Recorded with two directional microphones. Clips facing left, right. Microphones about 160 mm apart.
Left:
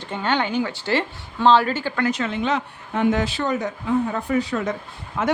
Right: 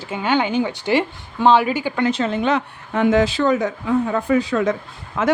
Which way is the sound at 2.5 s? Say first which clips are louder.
Right 4 dB; 80° right.